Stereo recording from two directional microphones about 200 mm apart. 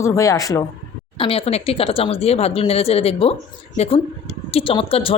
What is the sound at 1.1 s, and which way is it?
Speech, 25° left (ahead or behind).